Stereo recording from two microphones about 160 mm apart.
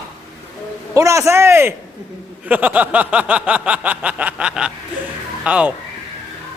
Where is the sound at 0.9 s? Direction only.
20° right (ahead or behind).